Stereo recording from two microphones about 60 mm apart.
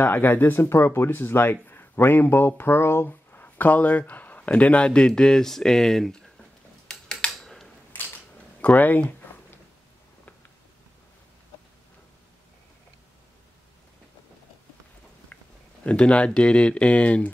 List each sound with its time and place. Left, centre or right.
0.0 s speech: left; by 6.4 s centre
6.9 s tick-tock: centre
8.5 s a sound: left
15.8 s speech: centre